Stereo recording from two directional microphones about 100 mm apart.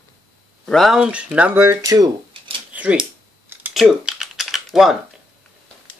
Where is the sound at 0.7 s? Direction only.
Centre (ahead or behind).